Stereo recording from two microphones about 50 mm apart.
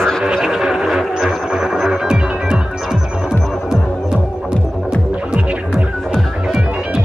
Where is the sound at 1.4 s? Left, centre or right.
Centre.